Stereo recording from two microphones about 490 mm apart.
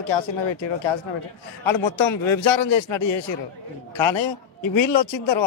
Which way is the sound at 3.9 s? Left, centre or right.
Left.